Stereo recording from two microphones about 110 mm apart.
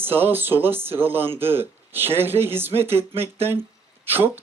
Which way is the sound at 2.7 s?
65° right (ahead or behind).